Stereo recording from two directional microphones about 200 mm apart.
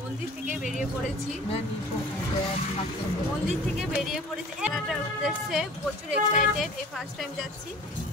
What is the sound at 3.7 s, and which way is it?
Speech, centre (ahead or behind).